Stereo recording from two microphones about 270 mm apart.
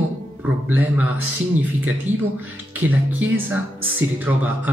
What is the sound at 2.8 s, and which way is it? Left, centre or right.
Speech, centre.